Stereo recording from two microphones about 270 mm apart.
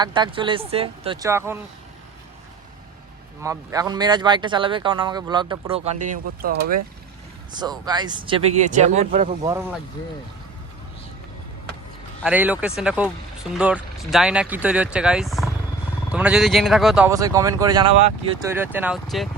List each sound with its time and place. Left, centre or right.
0.0 s speech: centre
3.4 s speech: centre; by 6.7 s right
7.5 s speech: centre
12.2 s speech: centre